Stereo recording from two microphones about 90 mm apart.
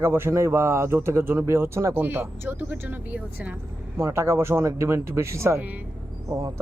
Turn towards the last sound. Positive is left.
turn(degrees=-40)  # may be behind; listen again after turning